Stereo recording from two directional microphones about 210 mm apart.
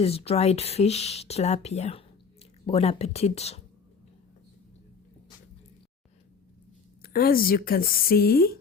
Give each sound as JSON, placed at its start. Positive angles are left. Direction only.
{"t": 0.0, "sound": "speech", "side_deg": 30}
{"t": 7.0, "sound": "speech", "side_deg": 45}